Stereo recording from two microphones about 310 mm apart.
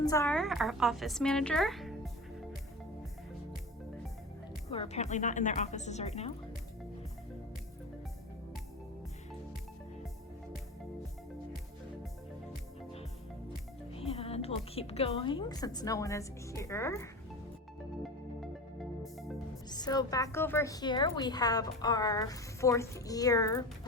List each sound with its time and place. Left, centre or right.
0.0 s a woman's voice: centre
4.7 s speech: centre
13.9 s a woman's voice: centre
18.8 s music: centre
19.7 s a woman's voice: centre